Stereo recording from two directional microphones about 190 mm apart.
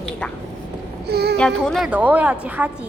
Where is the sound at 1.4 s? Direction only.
5° left (ahead or behind).